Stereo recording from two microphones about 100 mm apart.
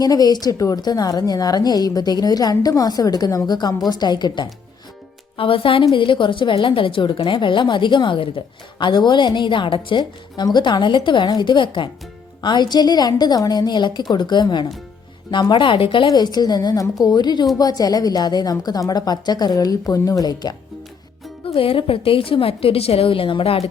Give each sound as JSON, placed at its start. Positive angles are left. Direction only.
{"t": 0.0, "sound": "a woman's voice", "side_deg": 40}
{"t": 5.4, "sound": "a woman's voice", "side_deg": 65}
{"t": 16.0, "sound": "a woman's voice", "side_deg": 45}
{"t": 21.4, "sound": "a woman's voice", "side_deg": 65}